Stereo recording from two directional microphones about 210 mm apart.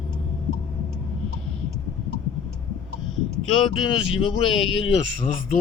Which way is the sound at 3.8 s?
25° left (ahead or behind).